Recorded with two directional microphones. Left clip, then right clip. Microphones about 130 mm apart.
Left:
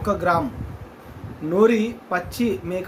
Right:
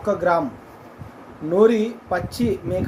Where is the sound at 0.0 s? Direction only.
20° left (ahead or behind).